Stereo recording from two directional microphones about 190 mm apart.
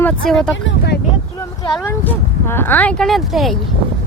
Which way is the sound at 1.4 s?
20° left (ahead or behind).